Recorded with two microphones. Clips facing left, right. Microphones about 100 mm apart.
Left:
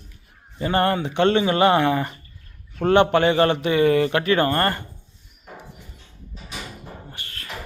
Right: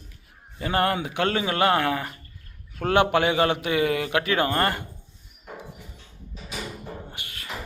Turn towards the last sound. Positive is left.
turn(degrees=-15)  # may be behind; listen again after turning